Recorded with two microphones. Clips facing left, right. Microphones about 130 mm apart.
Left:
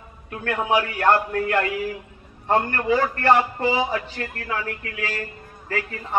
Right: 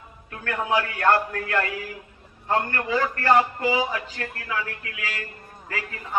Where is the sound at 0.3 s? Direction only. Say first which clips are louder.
Left 3 dB; 25° left (ahead or behind).